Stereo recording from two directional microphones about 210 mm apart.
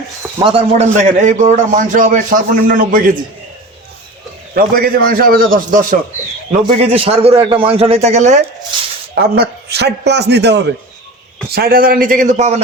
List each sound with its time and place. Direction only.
0.3 s a man's voice: 25° right (ahead or behind); by 3.1 s 40° right (ahead or behind)
4.5 s a man's voice: 45° right (ahead or behind)
6.9 s a man's voice: 30° right (ahead or behind)
9.1 s a man's voice: 50° right (ahead or behind)